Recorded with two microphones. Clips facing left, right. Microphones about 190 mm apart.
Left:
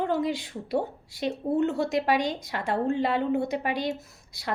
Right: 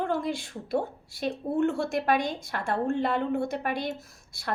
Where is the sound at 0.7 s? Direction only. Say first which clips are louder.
Left 1 dB; 20° left (ahead or behind).